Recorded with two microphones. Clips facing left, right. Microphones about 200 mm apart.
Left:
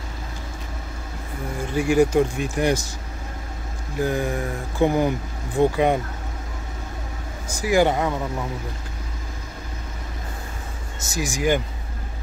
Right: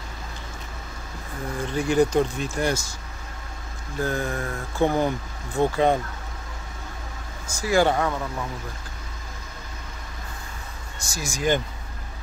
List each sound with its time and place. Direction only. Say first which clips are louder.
1.6 s speech: left 2 dB; 10° left (ahead or behind)
4.0 s speech: left 3 dB; 15° left (ahead or behind)
7.6 s speech: left 2 dB; 15° left (ahead or behind)
11.0 s speech: left 5 dB; 20° left (ahead or behind)